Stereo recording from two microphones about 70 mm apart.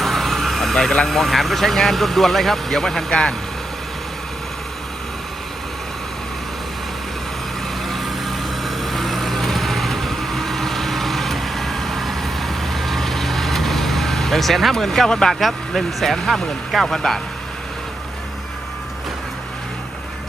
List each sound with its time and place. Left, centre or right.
0.0 s speech: centre
7.9 s vehicle: centre